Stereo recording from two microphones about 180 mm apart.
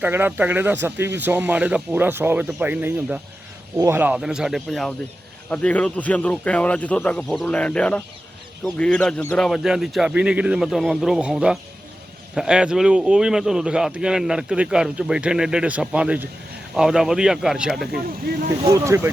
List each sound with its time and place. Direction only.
0.0 s a man's voice: 10° right (ahead or behind)
18.6 s speech: 15° right (ahead or behind)